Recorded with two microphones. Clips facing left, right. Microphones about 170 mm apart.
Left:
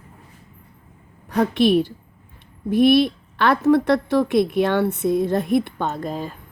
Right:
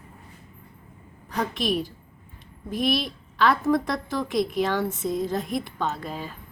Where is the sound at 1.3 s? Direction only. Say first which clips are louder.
Left 9 dB; 65° left (ahead or behind); by 6.3 s 45° left (ahead or behind).